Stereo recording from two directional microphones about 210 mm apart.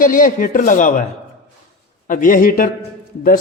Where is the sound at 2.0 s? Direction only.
40° left (ahead or behind).